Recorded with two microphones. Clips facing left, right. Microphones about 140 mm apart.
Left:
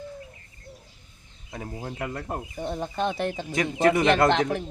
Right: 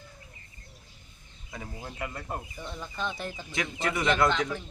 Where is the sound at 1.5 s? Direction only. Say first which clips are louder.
Left 5 dB; 45° left (ahead or behind); by 3.4 s 70° left (ahead or behind).